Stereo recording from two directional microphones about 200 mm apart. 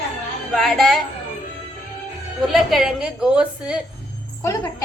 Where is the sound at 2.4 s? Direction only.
Centre (ahead or behind).